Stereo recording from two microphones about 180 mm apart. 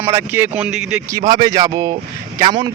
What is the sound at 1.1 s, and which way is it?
Speech, 25° right (ahead or behind).